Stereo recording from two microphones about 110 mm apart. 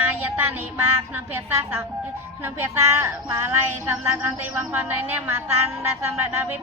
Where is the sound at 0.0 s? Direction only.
20° right (ahead or behind).